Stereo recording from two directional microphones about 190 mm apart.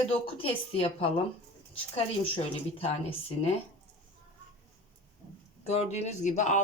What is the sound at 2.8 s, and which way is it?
Speech, 30° left (ahead or behind).